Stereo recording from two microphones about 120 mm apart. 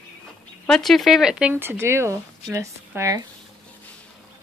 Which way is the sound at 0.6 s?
5° left (ahead or behind).